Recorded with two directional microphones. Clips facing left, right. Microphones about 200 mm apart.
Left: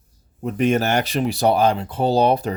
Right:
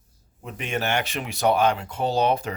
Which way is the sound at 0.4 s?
45° left (ahead or behind).